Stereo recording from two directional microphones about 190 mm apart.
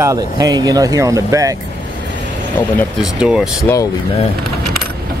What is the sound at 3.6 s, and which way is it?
Speech, 15° left (ahead or behind).